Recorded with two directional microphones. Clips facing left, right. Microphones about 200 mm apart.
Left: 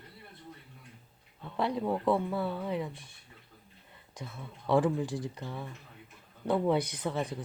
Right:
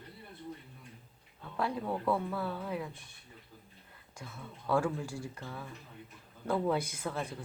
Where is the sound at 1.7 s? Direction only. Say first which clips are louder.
Left 5 dB; 15° left (ahead or behind).